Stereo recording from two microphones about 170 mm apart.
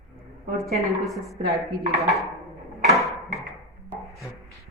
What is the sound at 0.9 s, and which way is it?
Speech, centre (ahead or behind).